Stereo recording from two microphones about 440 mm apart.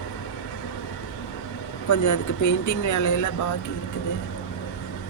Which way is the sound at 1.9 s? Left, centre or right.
Left.